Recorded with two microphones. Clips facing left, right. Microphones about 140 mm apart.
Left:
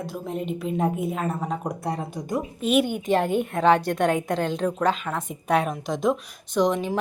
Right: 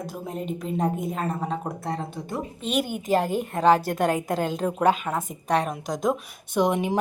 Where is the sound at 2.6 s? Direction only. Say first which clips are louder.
Left 4 dB; centre (ahead or behind).